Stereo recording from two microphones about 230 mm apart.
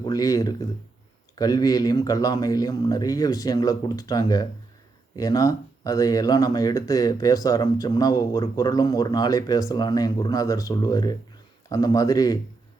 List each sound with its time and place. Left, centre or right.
0.0 s speech: centre